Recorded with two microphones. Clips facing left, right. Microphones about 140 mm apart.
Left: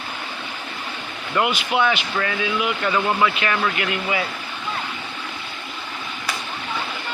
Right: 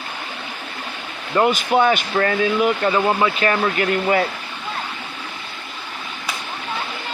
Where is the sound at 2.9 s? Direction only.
15° right (ahead or behind).